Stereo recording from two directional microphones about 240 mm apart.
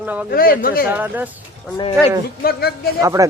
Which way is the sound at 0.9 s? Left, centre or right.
Centre.